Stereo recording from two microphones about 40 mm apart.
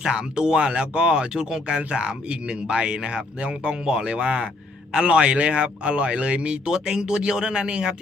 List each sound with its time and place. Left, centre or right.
0.0 s speech: centre
6.7 s speech: centre